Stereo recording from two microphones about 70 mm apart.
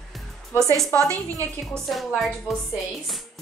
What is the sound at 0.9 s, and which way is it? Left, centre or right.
Speech, right.